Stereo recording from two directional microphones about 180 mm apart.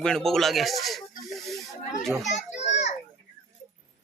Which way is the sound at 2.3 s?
40° left (ahead or behind).